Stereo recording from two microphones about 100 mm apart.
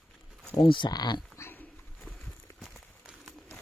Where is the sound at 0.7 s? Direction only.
50° left (ahead or behind).